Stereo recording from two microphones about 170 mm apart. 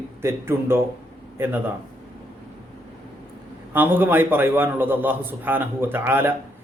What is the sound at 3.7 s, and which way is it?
Speech, 10° right (ahead or behind).